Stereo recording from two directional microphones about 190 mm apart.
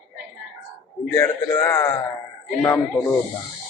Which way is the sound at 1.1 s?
15° left (ahead or behind).